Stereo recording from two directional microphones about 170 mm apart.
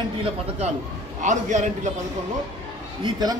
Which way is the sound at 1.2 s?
45° right (ahead or behind).